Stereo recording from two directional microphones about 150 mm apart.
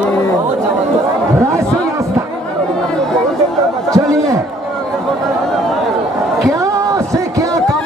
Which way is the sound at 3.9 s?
25° right (ahead or behind).